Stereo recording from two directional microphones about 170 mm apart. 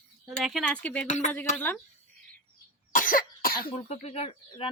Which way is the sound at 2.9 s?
55° left (ahead or behind).